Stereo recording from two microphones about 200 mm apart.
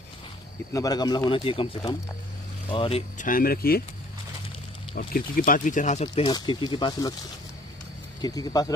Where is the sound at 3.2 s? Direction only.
45° left (ahead or behind).